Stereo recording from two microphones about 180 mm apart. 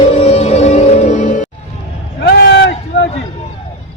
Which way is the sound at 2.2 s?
65° left (ahead or behind).